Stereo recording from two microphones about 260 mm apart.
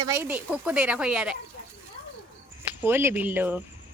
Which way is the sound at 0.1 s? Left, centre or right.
Centre.